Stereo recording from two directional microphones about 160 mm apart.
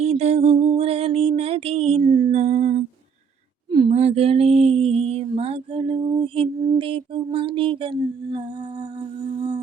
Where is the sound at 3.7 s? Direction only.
30° right (ahead or behind).